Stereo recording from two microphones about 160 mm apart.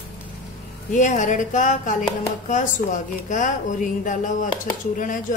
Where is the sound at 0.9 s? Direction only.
50° left (ahead or behind).